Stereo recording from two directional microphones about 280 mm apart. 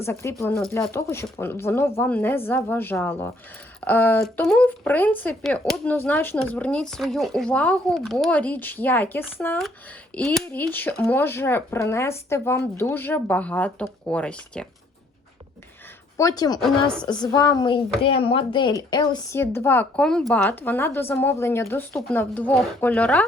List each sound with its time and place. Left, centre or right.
0.0 s a woman's voice: centre
16.1 s a woman's voice: centre
16.6 s speech: centre
17.1 s a woman's voice: centre